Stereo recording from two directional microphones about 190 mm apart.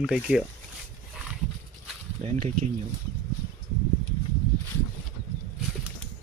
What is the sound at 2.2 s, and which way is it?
Speech, 40° right (ahead or behind).